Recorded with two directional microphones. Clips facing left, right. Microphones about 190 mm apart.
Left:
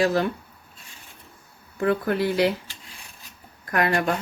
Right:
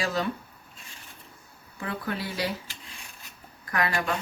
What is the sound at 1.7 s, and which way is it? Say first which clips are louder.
Speech: left 10 dB; 60° left (ahead or behind).